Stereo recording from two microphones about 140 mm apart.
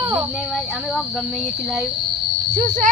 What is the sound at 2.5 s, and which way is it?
Speech, 70° right (ahead or behind).